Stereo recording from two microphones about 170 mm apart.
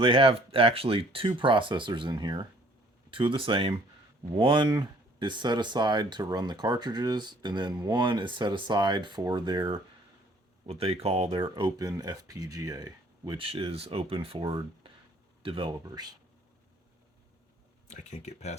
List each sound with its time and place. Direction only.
0.0 s speech: 30° right (ahead or behind)
13.4 s speech: 35° right (ahead or behind)
17.8 s speech: 45° left (ahead or behind)